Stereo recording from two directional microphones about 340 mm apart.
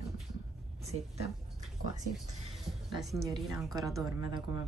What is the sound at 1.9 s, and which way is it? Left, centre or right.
Speech, right.